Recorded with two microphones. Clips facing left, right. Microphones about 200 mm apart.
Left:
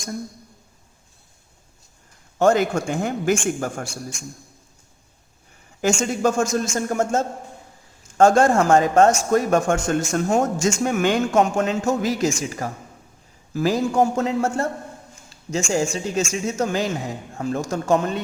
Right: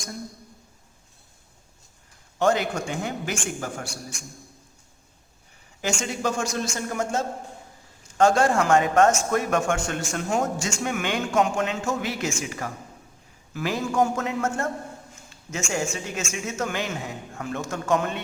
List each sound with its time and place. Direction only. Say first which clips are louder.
2.4 s speech: left 5 dB; 45° left (ahead or behind)
6.0 s speech: left 5 dB; 45° left (ahead or behind)
15.3 s a sound: left 8 dB; 35° left (ahead or behind)
15.7 s speech: left 6 dB; 35° left (ahead or behind)